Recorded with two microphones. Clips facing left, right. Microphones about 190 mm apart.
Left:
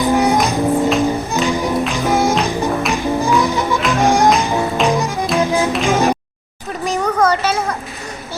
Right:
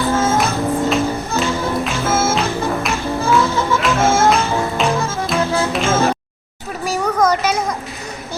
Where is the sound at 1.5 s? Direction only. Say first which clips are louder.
Left 2 dB; 15° left (ahead or behind).